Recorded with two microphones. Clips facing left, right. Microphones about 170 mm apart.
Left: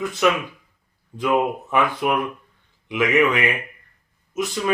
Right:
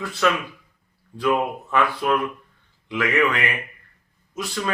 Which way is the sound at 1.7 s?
20° left (ahead or behind).